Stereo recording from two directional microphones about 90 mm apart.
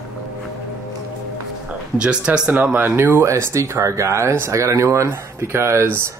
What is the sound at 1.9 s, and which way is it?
Speech, 10° right (ahead or behind).